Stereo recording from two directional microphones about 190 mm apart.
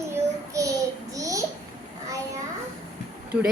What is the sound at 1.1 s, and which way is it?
Babbling, 15° right (ahead or behind).